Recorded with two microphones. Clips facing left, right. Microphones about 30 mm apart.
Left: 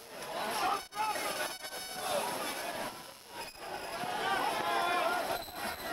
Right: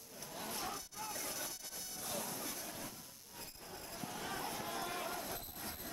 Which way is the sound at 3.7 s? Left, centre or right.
Left.